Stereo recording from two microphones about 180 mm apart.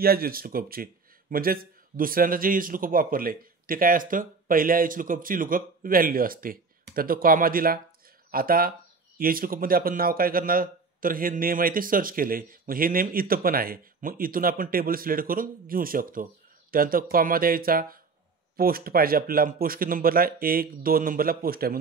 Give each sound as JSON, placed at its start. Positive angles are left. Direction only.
{"t": 0.0, "sound": "a man's voice", "side_deg": -55}